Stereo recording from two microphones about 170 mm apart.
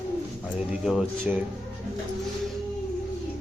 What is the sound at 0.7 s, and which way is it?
Speech, 5° right (ahead or behind).